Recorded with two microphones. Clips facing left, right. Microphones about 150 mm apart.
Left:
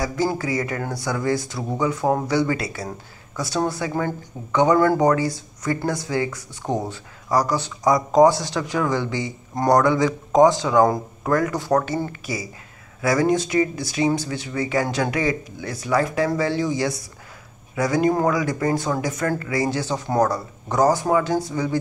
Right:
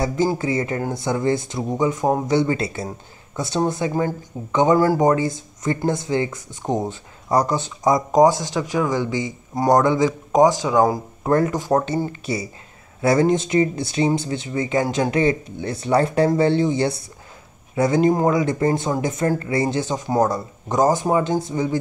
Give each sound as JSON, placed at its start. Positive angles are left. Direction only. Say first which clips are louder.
{"t": 0.0, "sound": "speech", "louder": "right 3 dB", "side_deg": -20}
{"t": 11.2, "sound": "speech", "louder": "right 2 dB", "side_deg": -25}